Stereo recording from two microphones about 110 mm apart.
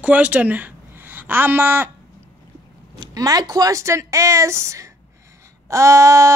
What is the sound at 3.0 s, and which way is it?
Speech, 35° right (ahead or behind).